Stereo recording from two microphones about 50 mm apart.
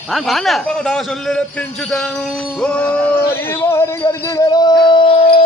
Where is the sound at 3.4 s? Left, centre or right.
Left.